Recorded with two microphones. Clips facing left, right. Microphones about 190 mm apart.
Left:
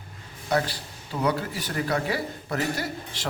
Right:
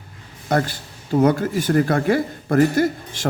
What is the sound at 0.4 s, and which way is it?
Speech, 50° right (ahead or behind).